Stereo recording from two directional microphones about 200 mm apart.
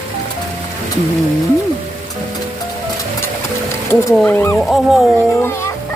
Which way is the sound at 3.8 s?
10° left (ahead or behind).